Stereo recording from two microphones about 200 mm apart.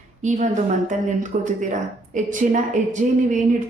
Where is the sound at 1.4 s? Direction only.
40° right (ahead or behind).